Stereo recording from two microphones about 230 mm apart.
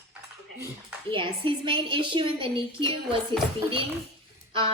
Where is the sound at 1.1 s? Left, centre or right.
Right.